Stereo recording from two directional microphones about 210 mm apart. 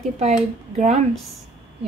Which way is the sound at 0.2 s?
35° right (ahead or behind).